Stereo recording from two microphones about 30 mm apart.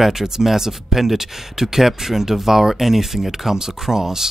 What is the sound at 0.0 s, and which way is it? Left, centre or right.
Speech, centre.